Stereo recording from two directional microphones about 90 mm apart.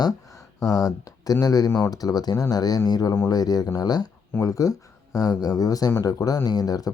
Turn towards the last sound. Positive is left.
turn(degrees=45)  # may be behind; listen again after turning